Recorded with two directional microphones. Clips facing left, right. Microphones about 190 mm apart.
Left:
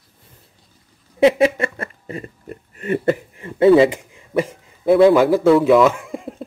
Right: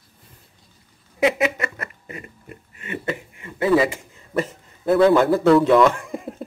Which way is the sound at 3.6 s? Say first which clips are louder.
Left 7 dB; 25° left (ahead or behind).